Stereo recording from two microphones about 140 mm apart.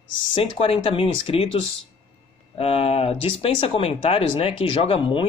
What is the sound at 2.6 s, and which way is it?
Speech, 45° left (ahead or behind).